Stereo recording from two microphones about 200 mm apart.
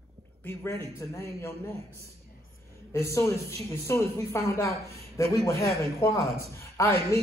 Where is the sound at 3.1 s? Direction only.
15° left (ahead or behind).